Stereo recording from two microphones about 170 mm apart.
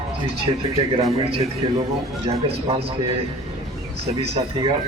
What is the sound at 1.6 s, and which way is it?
A man's voice, 30° right (ahead or behind).